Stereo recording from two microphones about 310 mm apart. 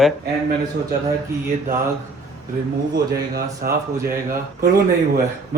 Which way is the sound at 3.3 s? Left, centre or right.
Right.